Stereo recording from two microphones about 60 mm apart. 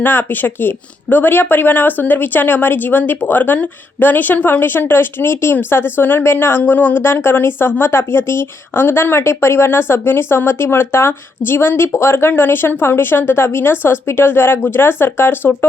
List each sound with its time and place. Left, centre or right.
0.0 s speech: left
7.0 s speech: left